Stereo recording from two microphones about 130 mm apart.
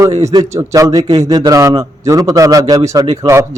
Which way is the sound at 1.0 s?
55° right (ahead or behind).